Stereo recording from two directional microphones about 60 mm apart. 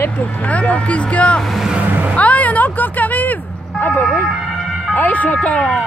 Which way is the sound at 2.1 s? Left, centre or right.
Left.